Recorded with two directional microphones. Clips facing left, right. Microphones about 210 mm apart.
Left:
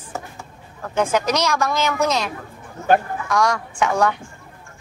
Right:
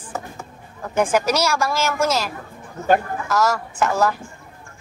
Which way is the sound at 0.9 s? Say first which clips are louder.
Right 1 dB; 10° right (ahead or behind).